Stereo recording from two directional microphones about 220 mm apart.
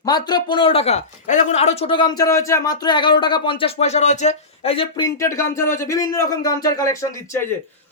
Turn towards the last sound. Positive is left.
turn(degrees=15)  # may be behind; listen again after turning